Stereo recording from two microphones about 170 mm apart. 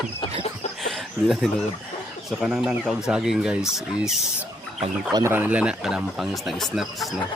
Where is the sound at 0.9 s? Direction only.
Centre (ahead or behind).